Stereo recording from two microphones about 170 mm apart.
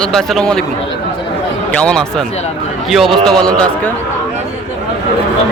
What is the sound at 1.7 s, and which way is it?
A man's voice, 5° left (ahead or behind).